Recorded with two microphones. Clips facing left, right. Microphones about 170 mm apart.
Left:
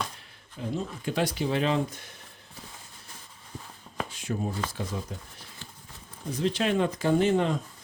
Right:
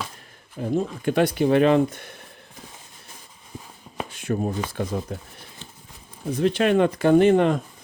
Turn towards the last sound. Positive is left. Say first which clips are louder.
# right 7 dB
turn(degrees=-60)  # may be behind; listen again after turning